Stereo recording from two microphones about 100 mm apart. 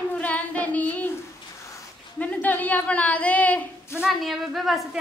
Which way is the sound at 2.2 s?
15° left (ahead or behind).